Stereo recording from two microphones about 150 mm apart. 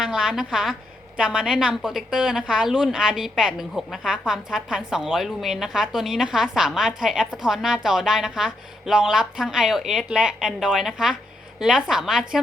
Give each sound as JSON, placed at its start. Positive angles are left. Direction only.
{"t": 0.0, "sound": "a woman's voice", "side_deg": -5}